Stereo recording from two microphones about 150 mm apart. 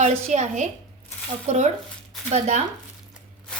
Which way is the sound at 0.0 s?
50° right (ahead or behind).